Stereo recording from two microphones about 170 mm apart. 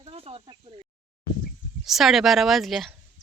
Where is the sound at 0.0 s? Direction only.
35° right (ahead or behind).